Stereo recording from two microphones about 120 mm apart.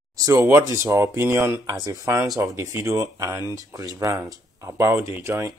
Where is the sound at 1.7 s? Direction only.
30° right (ahead or behind).